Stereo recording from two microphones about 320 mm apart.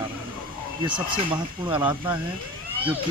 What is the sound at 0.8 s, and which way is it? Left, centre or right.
Speech, centre.